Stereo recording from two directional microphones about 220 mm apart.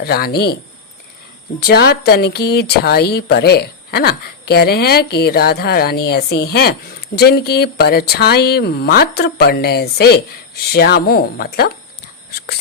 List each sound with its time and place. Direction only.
0.0 s speech: 45° left (ahead or behind)
1.6 s speech: 45° left (ahead or behind)